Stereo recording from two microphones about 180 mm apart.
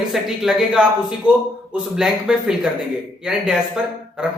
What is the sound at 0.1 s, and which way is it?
A man's voice, centre (ahead or behind).